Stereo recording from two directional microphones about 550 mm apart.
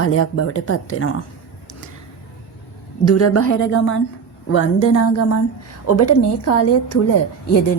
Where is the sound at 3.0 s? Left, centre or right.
Left.